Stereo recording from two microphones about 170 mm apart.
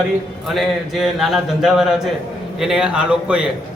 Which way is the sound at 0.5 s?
Centre (ahead or behind).